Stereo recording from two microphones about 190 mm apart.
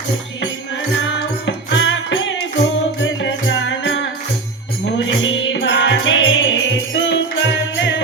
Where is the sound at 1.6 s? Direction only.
75° left (ahead or behind).